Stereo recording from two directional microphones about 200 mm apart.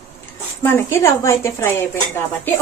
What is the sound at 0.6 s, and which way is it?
A woman's voice, 10° left (ahead or behind).